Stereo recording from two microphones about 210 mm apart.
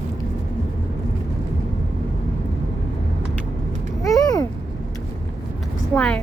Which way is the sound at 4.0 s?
15° left (ahead or behind).